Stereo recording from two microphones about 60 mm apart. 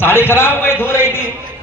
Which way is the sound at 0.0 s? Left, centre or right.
Left.